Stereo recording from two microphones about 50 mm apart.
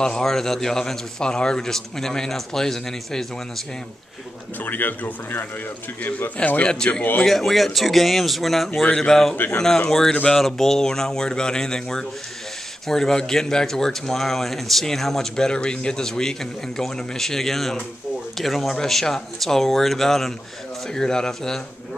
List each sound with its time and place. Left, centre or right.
0.0 s speech: centre
4.6 s speech: left
6.3 s a man's voice: left
7.2 s speech: centre